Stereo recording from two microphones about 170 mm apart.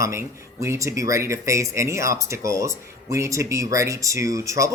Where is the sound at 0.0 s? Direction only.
15° right (ahead or behind).